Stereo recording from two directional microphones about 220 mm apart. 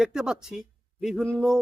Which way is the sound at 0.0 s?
5° right (ahead or behind).